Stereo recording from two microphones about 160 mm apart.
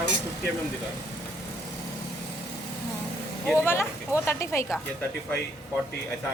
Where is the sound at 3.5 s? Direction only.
15° left (ahead or behind).